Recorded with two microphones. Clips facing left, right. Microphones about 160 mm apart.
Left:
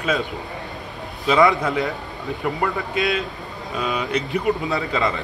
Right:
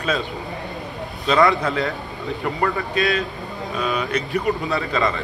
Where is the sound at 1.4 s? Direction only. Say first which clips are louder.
Left 1 dB; centre (ahead or behind).